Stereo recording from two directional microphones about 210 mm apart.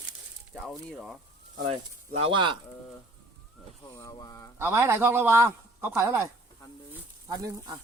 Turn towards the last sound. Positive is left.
turn(degrees=-15)  # may be behind; listen again after turning